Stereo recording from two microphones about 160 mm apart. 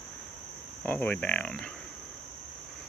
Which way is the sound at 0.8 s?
10° left (ahead or behind).